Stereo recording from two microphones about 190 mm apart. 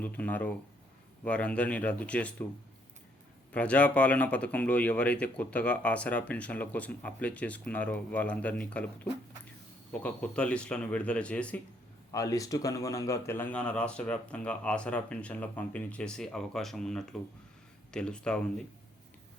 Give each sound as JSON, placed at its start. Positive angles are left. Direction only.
{"t": 0.0, "sound": "speech", "side_deg": 10}
{"t": 3.5, "sound": "speech", "side_deg": 5}
{"t": 10.0, "sound": "speech", "side_deg": 5}
{"t": 12.1, "sound": "speech", "side_deg": 20}